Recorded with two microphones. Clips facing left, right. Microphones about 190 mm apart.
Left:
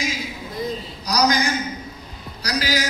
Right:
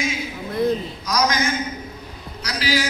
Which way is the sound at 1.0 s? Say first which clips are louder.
Left 3 dB; 35° left (ahead or behind).